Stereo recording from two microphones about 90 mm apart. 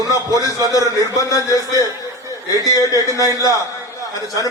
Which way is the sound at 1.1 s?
40° left (ahead or behind).